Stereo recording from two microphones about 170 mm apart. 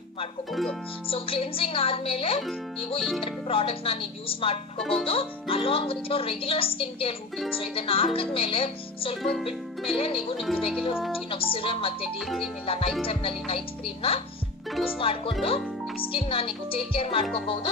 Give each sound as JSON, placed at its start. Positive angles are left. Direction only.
{"t": 0.5, "sound": "speech", "side_deg": 0}
{"t": 1.0, "sound": "speech", "side_deg": 35}
{"t": 3.0, "sound": "speech", "side_deg": 0}
{"t": 3.3, "sound": "speech", "side_deg": 35}
{"t": 4.7, "sound": "speech", "side_deg": 5}
{"t": 5.0, "sound": "speech", "side_deg": 35}
{"t": 10.4, "sound": "speech", "side_deg": 0}
{"t": 11.2, "sound": "speech", "side_deg": 35}
{"t": 12.2, "sound": "speech", "side_deg": 0}
{"t": 12.6, "sound": "speech", "side_deg": 35}